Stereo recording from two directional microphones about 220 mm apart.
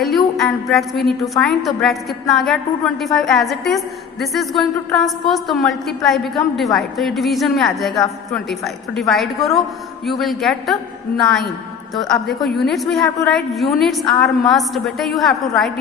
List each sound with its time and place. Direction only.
0.0 s a woman's voice: centre (ahead or behind)